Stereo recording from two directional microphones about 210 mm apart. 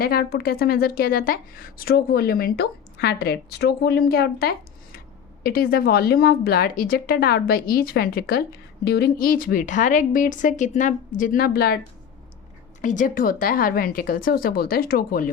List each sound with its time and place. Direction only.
0.0 s a woman's voice: 45° left (ahead or behind)
12.8 s a woman's voice: 35° left (ahead or behind)